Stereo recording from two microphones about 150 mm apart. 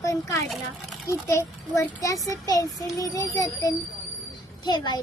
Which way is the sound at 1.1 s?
20° left (ahead or behind).